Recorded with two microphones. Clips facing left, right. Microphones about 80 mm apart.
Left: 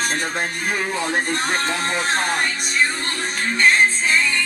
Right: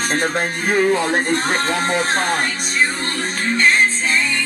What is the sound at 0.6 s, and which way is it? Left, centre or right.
Speech, right.